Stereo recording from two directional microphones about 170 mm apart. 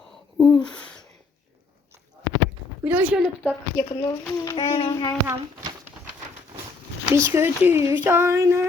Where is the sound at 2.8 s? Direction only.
10° right (ahead or behind).